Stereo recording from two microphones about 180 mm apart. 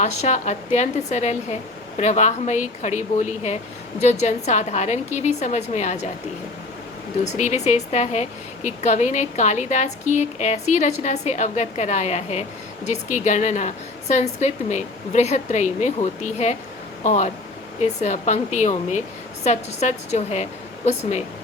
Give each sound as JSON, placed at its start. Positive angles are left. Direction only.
{"t": 0.0, "sound": "a woman's voice", "side_deg": 40}
{"t": 7.3, "sound": "a woman's voice", "side_deg": 40}